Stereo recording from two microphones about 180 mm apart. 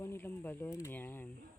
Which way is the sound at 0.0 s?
10° left (ahead or behind).